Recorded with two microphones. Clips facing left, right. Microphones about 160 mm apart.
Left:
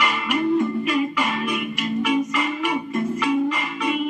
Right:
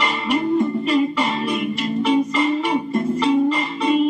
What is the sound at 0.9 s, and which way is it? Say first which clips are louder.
Music: right 4 dB; 30° right (ahead or behind).